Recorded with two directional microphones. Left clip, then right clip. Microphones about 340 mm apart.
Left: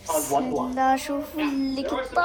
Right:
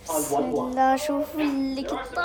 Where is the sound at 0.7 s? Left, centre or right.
Centre.